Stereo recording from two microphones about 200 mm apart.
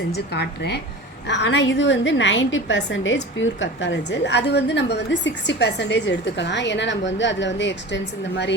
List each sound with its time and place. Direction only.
0.3 s a woman's voice: 55° left (ahead or behind)